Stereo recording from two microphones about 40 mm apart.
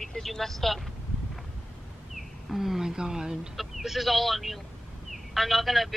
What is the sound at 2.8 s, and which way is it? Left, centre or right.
Speech, centre.